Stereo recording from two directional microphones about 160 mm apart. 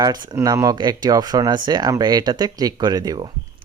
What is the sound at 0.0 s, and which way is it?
Speech, 25° right (ahead or behind).